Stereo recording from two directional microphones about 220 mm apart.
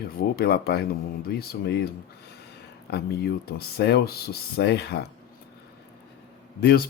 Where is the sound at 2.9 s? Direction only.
45° left (ahead or behind).